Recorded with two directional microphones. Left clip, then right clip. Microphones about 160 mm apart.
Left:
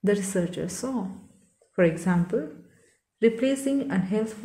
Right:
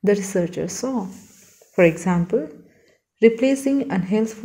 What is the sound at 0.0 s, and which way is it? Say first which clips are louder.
Speech: right 6 dB; 20° right (ahead or behind).